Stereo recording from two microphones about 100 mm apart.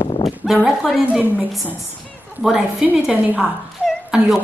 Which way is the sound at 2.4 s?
10° right (ahead or behind).